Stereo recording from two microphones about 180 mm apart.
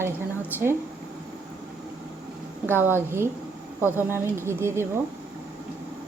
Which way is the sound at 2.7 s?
10° right (ahead or behind).